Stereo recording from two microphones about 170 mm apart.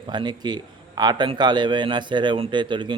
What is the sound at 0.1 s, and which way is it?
A man's voice, 25° right (ahead or behind).